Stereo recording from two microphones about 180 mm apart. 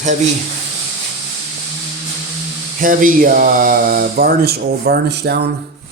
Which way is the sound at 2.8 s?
50° right (ahead or behind).